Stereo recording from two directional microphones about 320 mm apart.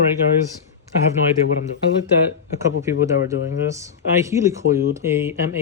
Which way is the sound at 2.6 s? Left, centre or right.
Centre.